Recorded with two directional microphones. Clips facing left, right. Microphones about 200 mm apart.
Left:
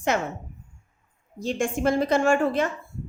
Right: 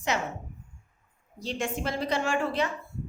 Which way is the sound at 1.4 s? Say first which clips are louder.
Left 6 dB; 50° left (ahead or behind).